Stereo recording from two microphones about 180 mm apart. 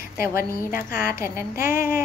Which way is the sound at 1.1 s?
15° right (ahead or behind).